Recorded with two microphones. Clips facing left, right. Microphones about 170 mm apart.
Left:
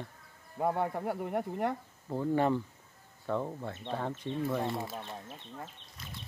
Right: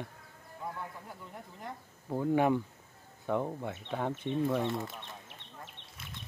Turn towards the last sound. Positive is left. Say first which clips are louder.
# right 1 dB
turn(degrees=-70)  # may be behind; listen again after turning